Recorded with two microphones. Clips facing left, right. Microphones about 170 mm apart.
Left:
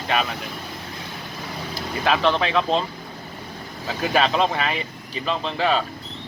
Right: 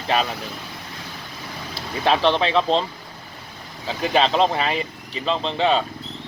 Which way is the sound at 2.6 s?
5° left (ahead or behind).